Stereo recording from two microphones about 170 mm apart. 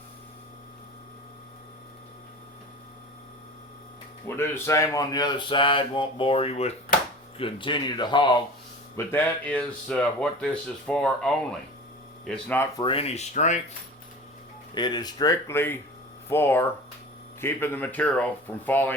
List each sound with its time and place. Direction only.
4.4 s speech: 15° left (ahead or behind)
9.0 s speech: 10° left (ahead or behind)
12.3 s speech: 10° left (ahead or behind)
12.7 s speech: 30° left (ahead or behind); by 13.6 s 45° left (ahead or behind)
14.8 s speech: 25° left (ahead or behind)